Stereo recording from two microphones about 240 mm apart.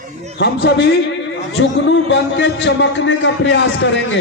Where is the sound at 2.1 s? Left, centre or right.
Left.